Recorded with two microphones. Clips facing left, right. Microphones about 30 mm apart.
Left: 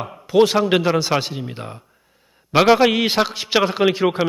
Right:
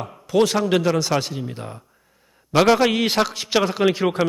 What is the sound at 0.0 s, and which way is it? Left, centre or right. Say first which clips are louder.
A man's voice: left 3 dB; left.